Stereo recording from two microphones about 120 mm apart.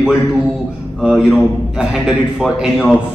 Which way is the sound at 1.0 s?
10° right (ahead or behind).